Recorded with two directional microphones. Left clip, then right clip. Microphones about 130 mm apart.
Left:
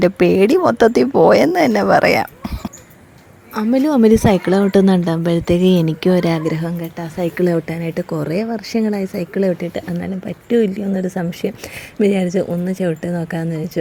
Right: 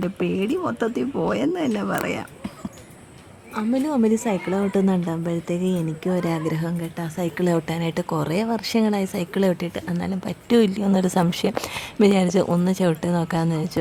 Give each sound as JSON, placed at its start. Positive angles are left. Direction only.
{"t": 0.0, "sound": "speech", "side_deg": 45}
{"t": 3.5, "sound": "a woman's voice", "side_deg": 30}
{"t": 6.1, "sound": "speech", "side_deg": 20}
{"t": 7.5, "sound": "speech", "side_deg": -5}
{"t": 9.7, "sound": "speech", "side_deg": 15}
{"t": 10.7, "sound": "a woman's voice", "side_deg": -10}
{"t": 11.1, "sound": "a woman's voice", "side_deg": -25}